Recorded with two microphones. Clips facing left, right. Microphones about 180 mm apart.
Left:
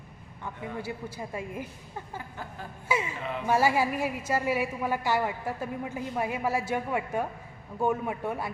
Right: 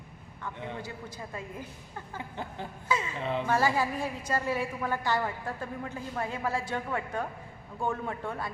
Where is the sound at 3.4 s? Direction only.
10° left (ahead or behind).